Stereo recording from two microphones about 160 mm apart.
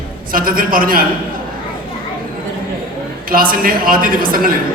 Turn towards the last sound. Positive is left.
turn(degrees=-60)  # may be behind; listen again after turning